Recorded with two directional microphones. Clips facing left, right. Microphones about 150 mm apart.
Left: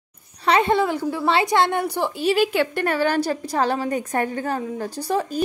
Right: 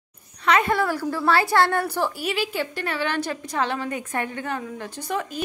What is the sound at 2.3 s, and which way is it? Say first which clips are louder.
Speech: left 7 dB; 65° left (ahead or behind).